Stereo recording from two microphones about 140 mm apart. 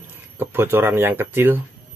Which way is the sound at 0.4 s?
15° right (ahead or behind).